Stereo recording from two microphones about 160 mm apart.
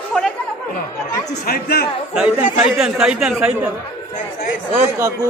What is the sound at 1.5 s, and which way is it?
Speech, 75° left (ahead or behind).